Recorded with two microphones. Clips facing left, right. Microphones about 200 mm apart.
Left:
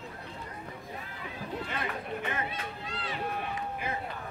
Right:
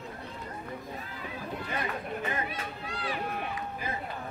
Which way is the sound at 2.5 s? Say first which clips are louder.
Right 1 dB; 25° left (ahead or behind).